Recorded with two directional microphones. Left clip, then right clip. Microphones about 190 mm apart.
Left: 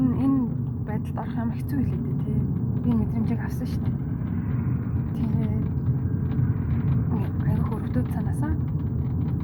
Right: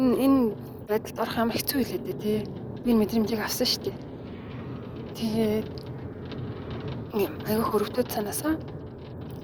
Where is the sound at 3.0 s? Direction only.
45° right (ahead or behind).